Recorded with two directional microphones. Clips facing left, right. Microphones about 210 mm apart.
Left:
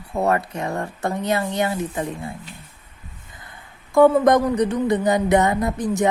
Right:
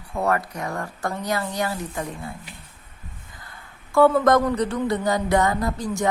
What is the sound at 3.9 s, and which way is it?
Speech, 15° left (ahead or behind).